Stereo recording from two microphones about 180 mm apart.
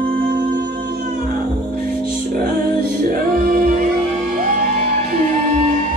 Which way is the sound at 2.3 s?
55° right (ahead or behind).